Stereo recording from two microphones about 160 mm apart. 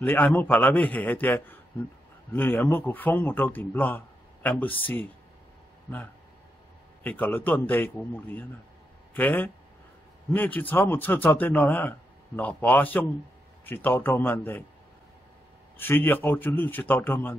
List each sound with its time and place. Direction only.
0.0 s a man's voice: 10° left (ahead or behind)
7.0 s a man's voice: 10° left (ahead or behind)
15.8 s a man's voice: 15° left (ahead or behind)